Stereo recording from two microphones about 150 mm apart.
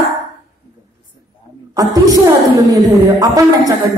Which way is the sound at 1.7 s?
25° right (ahead or behind).